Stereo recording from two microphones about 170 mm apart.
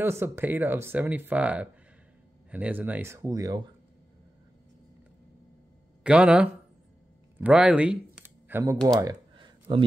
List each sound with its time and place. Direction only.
0.0 s speech: 15° right (ahead or behind)
6.0 s speech: 5° right (ahead or behind)
7.3 s a sound: 10° right (ahead or behind); by 9.8 s 25° right (ahead or behind)